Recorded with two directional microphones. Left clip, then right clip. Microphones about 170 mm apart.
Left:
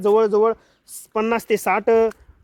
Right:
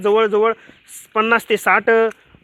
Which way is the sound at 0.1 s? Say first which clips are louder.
Right 1 dB; 10° right (ahead or behind).